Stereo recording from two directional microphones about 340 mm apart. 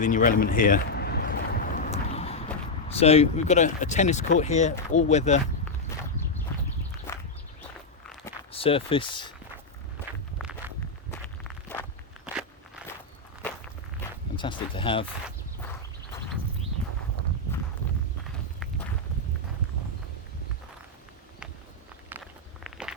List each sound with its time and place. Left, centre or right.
0.0 s a sound: left
2.9 s speech: centre
8.5 s speech: centre
10.6 s walk: centre
11.1 s walk: centre
14.3 s speech: centre
22.1 s walk: centre